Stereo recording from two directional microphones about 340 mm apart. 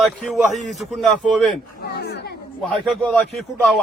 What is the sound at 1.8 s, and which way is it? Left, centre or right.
Speech, left.